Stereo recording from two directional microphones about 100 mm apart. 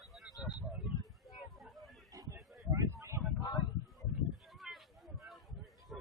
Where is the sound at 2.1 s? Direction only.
35° right (ahead or behind).